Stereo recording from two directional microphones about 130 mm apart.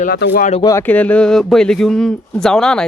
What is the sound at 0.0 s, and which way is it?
Speech, 80° left.